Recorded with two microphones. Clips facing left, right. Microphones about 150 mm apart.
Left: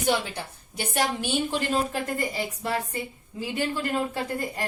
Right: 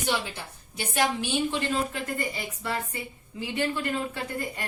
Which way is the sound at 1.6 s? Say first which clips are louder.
Left 2 dB; 35° left (ahead or behind).